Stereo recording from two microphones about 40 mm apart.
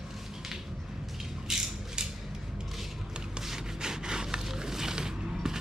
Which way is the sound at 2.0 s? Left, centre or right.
Right.